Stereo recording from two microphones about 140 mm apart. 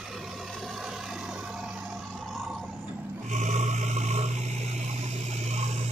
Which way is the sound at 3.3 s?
60° right (ahead or behind).